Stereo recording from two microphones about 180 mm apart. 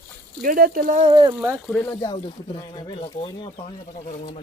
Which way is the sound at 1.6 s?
5° left (ahead or behind).